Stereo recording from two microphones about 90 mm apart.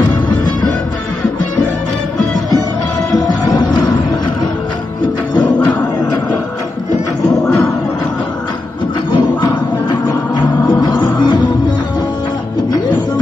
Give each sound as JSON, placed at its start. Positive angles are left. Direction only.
{"t": 3.2, "sound": "music", "side_deg": 45}
{"t": 7.2, "sound": "a sound", "side_deg": 10}
{"t": 9.1, "sound": "music", "side_deg": 55}